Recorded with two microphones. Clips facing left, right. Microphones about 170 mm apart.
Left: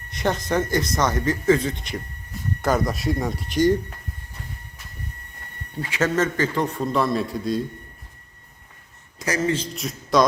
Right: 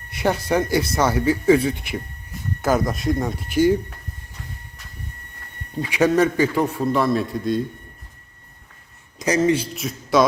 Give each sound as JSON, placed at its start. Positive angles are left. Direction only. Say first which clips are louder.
{"t": 0.1, "sound": "a man's voice", "louder": "right 3 dB", "side_deg": -10}
{"t": 5.8, "sound": "a man's voice", "louder": "right 5 dB", "side_deg": -15}
{"t": 9.1, "sound": "speech", "louder": "right 5 dB", "side_deg": -20}
{"t": 9.7, "sound": "a man's voice", "louder": "right 1 dB", "side_deg": -5}